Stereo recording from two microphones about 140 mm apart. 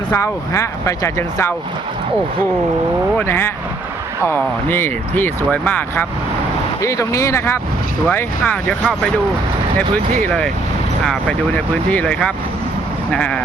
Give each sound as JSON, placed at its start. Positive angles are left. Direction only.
{"t": 0.1, "sound": "speech", "side_deg": 20}
{"t": 3.2, "sound": "speech", "side_deg": 15}